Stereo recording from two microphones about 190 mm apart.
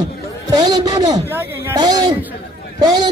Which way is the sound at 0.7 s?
20° right (ahead or behind).